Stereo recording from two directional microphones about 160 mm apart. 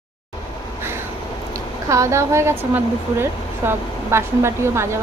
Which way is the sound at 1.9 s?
20° right (ahead or behind).